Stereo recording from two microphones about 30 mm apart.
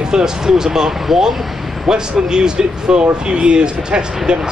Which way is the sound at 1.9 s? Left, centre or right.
Right.